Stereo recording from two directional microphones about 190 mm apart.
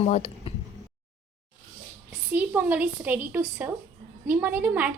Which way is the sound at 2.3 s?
10° right (ahead or behind).